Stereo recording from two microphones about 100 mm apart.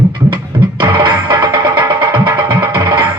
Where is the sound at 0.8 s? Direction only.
50° right (ahead or behind).